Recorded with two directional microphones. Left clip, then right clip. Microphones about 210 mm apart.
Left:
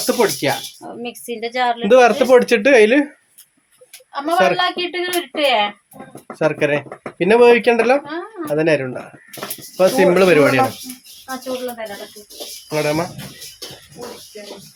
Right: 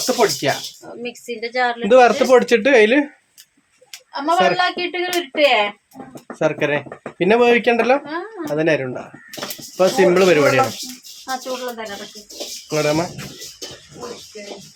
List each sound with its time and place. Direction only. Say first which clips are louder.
0.0 s speech: even; 10° left (ahead or behind)
1.0 s a woman's voice: left 1 dB; 25° left (ahead or behind)
1.8 s speech: even; 10° left (ahead or behind)
4.1 s a woman's voice: left 1 dB; centre (ahead or behind)
6.4 s speech: left 2 dB; 10° left (ahead or behind)
12.7 s a woman's voice: even; centre (ahead or behind)